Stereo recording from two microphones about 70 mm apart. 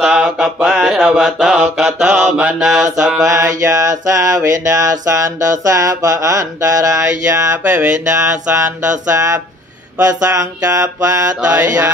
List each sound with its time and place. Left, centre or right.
0.0 s mantra: centre
1.0 s mantra: centre
3.3 s mantra: right
11.5 s a sound: right